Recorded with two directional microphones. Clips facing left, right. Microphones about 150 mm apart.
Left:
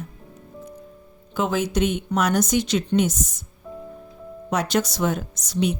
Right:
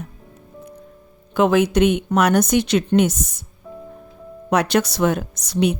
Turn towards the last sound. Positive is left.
turn(degrees=-65)  # may be behind; listen again after turning